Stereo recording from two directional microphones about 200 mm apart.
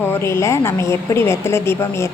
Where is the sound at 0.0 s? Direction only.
10° left (ahead or behind).